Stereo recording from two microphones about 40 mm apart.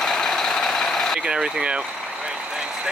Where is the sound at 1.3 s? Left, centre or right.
Right.